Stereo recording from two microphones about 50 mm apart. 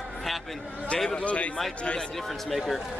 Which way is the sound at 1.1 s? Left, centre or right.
Left.